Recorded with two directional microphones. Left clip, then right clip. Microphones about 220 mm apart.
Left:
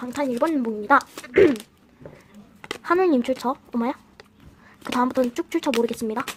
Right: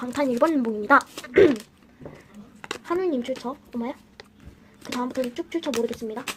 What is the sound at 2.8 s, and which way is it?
Speech, 25° left (ahead or behind).